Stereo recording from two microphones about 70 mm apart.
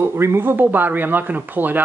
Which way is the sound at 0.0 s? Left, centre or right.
Right.